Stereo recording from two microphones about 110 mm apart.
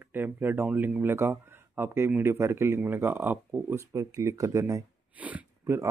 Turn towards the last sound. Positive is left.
turn(degrees=-25)  # may be behind; listen again after turning